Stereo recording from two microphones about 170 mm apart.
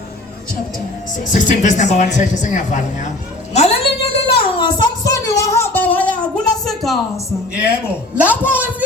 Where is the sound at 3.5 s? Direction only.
40° left (ahead or behind).